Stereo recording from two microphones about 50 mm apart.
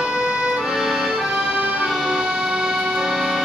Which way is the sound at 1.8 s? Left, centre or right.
Centre.